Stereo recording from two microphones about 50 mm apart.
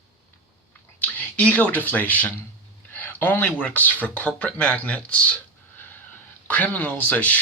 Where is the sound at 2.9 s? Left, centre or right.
Left.